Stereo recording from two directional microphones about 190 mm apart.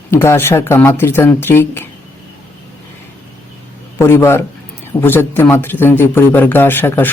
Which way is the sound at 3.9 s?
15° left (ahead or behind).